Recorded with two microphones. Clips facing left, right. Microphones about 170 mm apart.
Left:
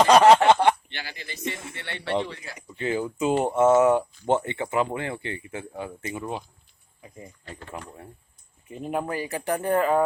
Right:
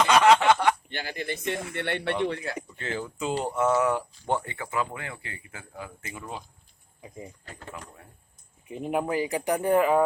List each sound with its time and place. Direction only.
0.0 s a sound: 35° left (ahead or behind)
0.9 s speech: 45° right (ahead or behind)
2.7 s speech: 15° left (ahead or behind)
8.7 s speech: 15° right (ahead or behind)